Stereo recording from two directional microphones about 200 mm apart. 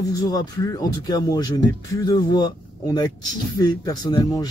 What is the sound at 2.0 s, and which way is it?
Speech, 20° left (ahead or behind).